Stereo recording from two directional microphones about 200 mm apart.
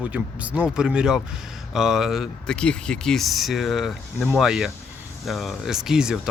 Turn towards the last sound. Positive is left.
turn(degrees=-5)  # may be behind; listen again after turning